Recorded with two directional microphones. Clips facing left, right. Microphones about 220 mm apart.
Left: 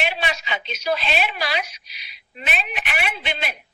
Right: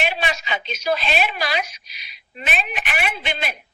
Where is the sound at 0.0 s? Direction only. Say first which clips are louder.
Right 1 dB; 45° right (ahead or behind).